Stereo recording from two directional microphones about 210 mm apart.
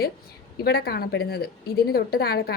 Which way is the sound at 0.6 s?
50° left (ahead or behind).